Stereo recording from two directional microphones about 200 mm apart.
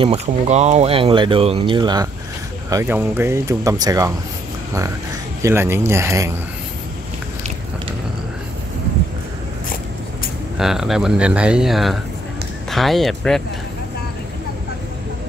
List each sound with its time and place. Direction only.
0.0 s speech: 30° right (ahead or behind)
5.4 s speech: 10° right (ahead or behind)
10.6 s speech: centre (ahead or behind)